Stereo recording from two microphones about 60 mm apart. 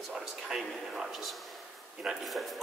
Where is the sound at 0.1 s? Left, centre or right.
Centre.